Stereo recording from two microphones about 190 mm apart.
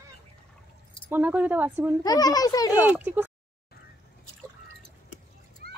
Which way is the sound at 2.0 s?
20° left (ahead or behind).